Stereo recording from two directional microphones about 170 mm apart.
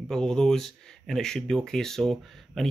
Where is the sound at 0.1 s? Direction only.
Centre (ahead or behind).